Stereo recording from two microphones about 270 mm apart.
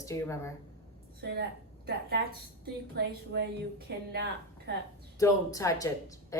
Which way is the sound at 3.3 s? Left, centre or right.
Right.